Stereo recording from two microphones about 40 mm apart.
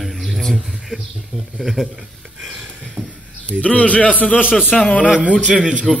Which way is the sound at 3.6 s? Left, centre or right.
Left.